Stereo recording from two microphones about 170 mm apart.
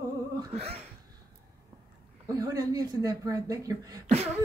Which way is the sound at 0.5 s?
35° right (ahead or behind).